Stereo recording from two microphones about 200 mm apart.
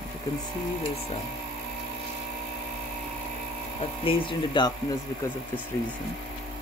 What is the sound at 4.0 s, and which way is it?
Speech, 25° left (ahead or behind).